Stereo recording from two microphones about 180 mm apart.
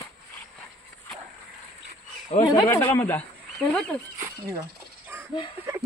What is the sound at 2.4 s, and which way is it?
Speech, 15° left (ahead or behind).